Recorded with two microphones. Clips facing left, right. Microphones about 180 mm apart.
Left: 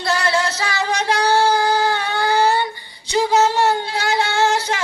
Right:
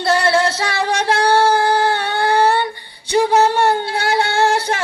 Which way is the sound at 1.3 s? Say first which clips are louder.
Right 2 dB; 55° right (ahead or behind).